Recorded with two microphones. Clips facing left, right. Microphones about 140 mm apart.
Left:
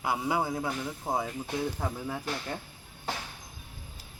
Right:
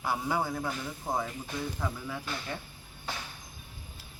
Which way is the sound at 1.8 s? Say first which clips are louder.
Left 2 dB; 45° left (ahead or behind).